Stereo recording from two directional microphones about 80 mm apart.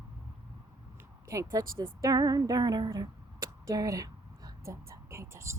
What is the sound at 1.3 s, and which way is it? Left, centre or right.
Speech, right.